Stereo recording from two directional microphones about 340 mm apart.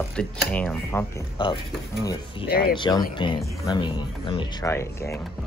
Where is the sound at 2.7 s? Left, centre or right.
Centre.